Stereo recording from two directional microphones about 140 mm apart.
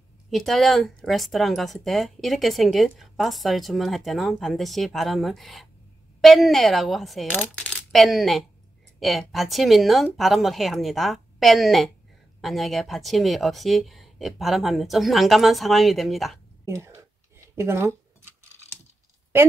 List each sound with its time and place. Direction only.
0.3 s speech: centre (ahead or behind)
16.6 s speech: 20° right (ahead or behind)
17.6 s a sound: 20° right (ahead or behind)